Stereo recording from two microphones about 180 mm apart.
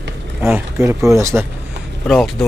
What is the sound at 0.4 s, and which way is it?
A man's voice, 15° right (ahead or behind).